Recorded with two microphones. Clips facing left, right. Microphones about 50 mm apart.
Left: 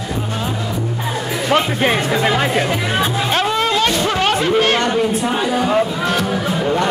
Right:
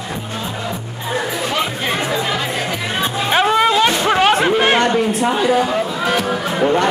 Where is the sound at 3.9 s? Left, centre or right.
Right.